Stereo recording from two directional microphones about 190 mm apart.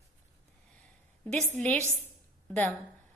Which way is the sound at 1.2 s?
5° left (ahead or behind).